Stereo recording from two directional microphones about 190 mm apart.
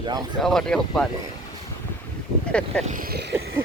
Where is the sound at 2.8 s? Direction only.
50° right (ahead or behind).